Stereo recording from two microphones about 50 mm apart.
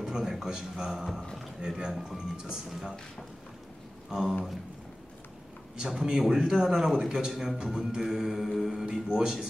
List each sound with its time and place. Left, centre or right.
0.0 s a man's voice: centre
1.9 s speech: centre
2.1 s a man's voice: centre
4.1 s a man's voice: centre
5.8 s a man's voice: centre